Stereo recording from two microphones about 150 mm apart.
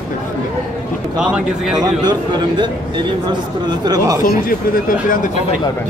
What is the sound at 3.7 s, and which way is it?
Speech, 25° right (ahead or behind).